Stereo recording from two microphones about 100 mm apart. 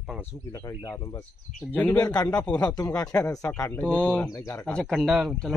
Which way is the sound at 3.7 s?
15° left (ahead or behind).